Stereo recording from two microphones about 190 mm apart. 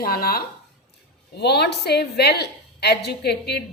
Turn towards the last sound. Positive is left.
turn(degrees=60)  # may be behind; listen again after turning